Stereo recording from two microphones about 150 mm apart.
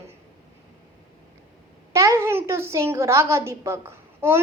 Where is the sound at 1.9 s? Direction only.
20° right (ahead or behind).